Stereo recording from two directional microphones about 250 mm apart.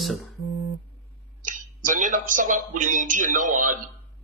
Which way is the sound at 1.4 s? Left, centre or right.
Right.